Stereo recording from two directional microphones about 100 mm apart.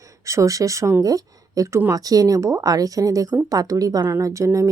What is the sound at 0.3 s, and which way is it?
A woman's voice, 30° right (ahead or behind).